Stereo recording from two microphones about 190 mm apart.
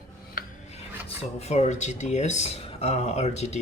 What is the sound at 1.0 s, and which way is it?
Speech, 35° left (ahead or behind).